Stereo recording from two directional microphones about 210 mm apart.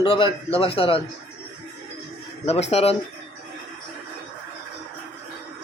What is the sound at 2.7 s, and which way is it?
Speech, 30° left (ahead or behind).